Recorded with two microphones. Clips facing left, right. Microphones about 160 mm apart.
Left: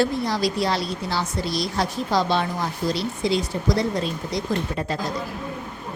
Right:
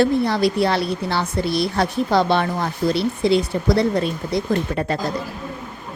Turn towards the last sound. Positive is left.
turn(degrees=-60)  # may be behind; listen again after turning